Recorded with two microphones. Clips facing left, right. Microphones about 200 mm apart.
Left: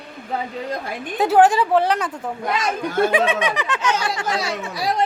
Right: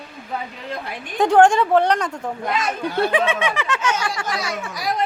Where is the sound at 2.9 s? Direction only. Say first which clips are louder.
Left 2 dB; 45° left (ahead or behind).